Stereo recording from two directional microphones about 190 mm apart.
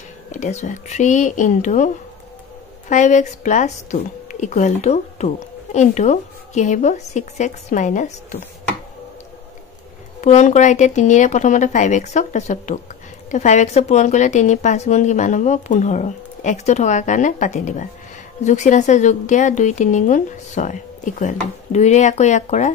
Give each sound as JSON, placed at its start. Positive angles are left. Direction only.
{"t": 0.3, "sound": "a woman's voice", "side_deg": 40}
{"t": 2.9, "sound": "a woman's voice", "side_deg": 40}
{"t": 10.2, "sound": "a woman's voice", "side_deg": 40}